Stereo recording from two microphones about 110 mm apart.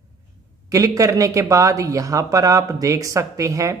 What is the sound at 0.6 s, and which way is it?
Speech, 30° right (ahead or behind).